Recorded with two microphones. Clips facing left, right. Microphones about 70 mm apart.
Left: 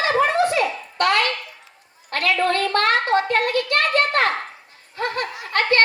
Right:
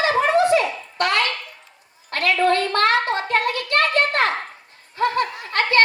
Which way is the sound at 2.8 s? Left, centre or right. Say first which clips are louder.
Even; right.